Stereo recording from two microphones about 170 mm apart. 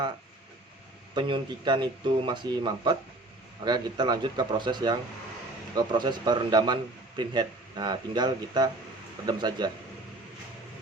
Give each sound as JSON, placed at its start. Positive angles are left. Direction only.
{"t": 1.1, "sound": "speech", "side_deg": -25}